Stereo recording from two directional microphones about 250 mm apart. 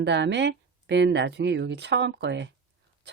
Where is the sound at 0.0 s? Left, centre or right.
Right.